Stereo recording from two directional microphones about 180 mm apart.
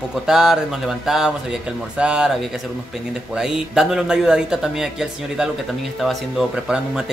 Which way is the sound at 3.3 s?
5° right (ahead or behind).